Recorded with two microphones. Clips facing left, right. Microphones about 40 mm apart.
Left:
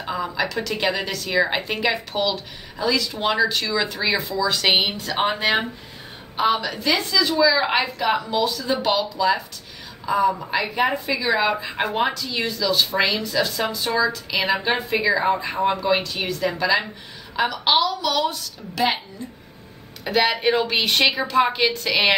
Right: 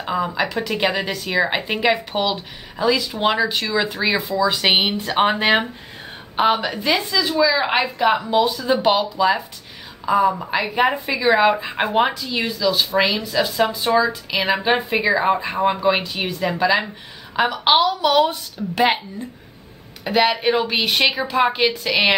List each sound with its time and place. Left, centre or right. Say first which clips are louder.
0.3 s a woman's voice: right 2 dB; centre
4.9 s a woman's voice: right 5 dB; right
6.7 s a woman's voice: right 1 dB; centre
14.4 s a woman's voice: right 3 dB; centre
14.9 s a woman's voice: right 2 dB; centre
20.1 s speech: right 2 dB; centre